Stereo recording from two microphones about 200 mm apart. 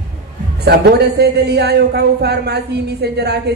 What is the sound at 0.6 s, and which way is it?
Speech, 55° right (ahead or behind).